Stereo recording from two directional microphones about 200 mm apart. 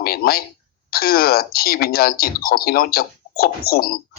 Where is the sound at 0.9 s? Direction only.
50° left (ahead or behind).